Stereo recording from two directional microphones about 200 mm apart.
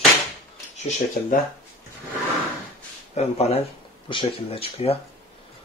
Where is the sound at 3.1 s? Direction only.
30° left (ahead or behind).